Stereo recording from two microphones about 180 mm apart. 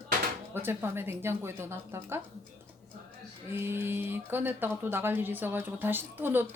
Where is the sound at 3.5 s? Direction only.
15° right (ahead or behind).